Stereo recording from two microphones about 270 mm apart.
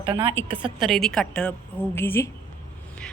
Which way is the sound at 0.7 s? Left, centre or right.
Centre.